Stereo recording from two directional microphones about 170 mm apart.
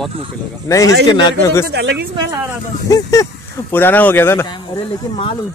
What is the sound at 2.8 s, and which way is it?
Speech, 20° left (ahead or behind).